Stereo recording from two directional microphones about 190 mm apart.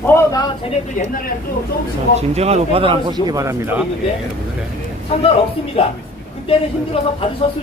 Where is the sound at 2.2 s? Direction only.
35° right (ahead or behind); by 3.9 s 10° right (ahead or behind).